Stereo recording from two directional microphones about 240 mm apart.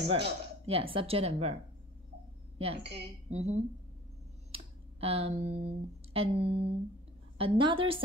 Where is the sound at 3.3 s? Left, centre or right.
Right.